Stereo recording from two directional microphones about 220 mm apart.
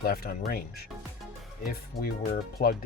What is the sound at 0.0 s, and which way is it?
Speech, 45° left (ahead or behind).